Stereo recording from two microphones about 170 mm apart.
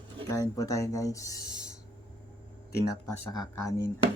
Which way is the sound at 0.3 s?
20° left (ahead or behind).